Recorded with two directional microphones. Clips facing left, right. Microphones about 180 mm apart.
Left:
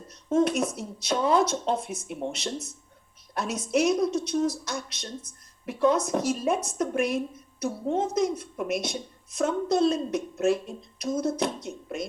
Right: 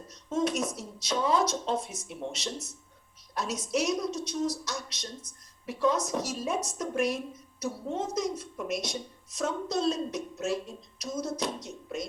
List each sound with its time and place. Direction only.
0.1 s a woman's voice: 55° left (ahead or behind)